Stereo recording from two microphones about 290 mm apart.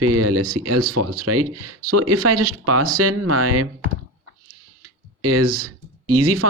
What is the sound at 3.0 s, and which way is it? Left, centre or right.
Speech, right.